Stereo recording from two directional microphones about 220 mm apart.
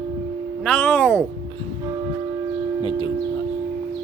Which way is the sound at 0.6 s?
5° left (ahead or behind).